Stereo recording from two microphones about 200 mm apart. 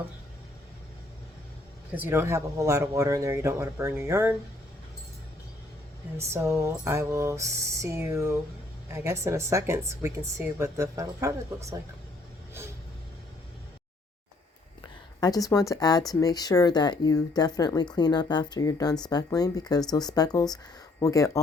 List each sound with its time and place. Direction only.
2.0 s a woman's voice: 10° right (ahead or behind)
6.1 s a woman's voice: 15° right (ahead or behind)
15.2 s speech: 20° left (ahead or behind)